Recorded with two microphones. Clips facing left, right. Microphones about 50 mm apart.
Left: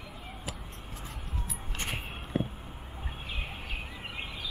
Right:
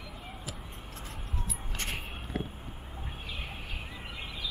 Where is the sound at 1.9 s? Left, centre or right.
Centre.